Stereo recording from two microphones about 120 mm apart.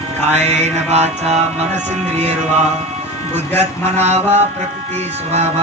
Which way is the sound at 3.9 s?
65° right (ahead or behind).